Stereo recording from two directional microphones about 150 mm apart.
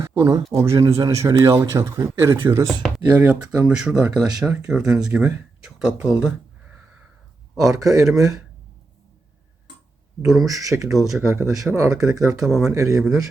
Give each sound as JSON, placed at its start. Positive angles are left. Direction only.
{"t": 0.0, "sound": "a man's voice", "side_deg": -20}
{"t": 3.6, "sound": "speech", "side_deg": -5}
{"t": 7.7, "sound": "a man's voice", "side_deg": -20}
{"t": 10.4, "sound": "a man's voice", "side_deg": -20}
{"t": 10.8, "sound": "speech", "side_deg": 0}
{"t": 11.3, "sound": "a man's voice", "side_deg": -20}
{"t": 12.4, "sound": "speech", "side_deg": 0}
{"t": 12.7, "sound": "a man's voice", "side_deg": -20}